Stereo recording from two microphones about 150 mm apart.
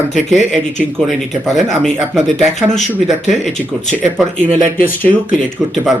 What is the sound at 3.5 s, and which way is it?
Speech, 50° left (ahead or behind).